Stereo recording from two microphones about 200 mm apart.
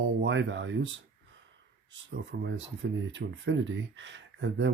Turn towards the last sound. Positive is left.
turn(degrees=-65)  # may be behind; listen again after turning